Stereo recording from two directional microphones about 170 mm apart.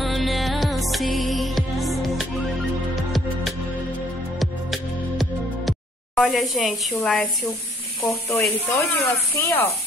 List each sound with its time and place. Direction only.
0.0 s music: centre (ahead or behind)
7.0 s a woman's voice: 5° left (ahead or behind)
8.3 s speech: 15° left (ahead or behind)